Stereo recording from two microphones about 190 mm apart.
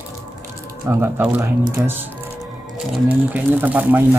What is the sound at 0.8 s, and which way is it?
Speech, 10° right (ahead or behind).